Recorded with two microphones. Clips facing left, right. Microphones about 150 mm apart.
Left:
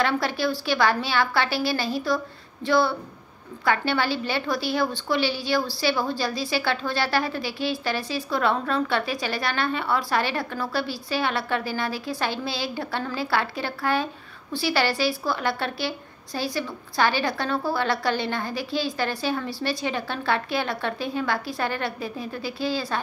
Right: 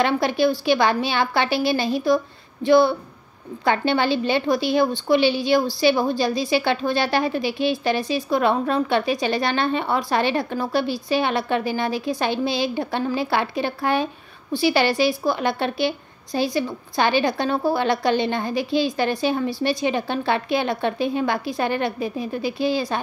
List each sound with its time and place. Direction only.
0.0 s a woman's voice: 20° right (ahead or behind)